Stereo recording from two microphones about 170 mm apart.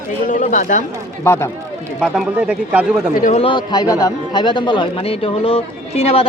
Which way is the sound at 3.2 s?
35° left (ahead or behind).